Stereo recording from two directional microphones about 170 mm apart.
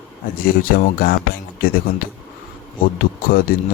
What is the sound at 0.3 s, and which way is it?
Speech, 60° left (ahead or behind).